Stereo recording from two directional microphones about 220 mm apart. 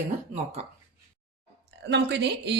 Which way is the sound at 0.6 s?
30° right (ahead or behind).